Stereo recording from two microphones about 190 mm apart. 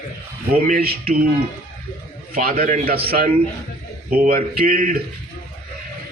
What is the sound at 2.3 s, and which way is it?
A man's voice, 50° right (ahead or behind).